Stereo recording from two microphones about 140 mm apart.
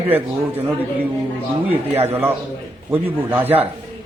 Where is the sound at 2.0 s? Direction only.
15° right (ahead or behind).